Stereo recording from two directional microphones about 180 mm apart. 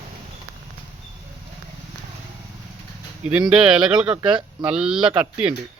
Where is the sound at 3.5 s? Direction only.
5° right (ahead or behind).